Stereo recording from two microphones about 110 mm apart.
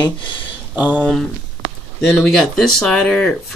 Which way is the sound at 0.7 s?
15° right (ahead or behind).